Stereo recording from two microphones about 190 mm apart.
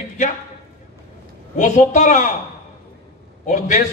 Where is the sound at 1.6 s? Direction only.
40° left (ahead or behind).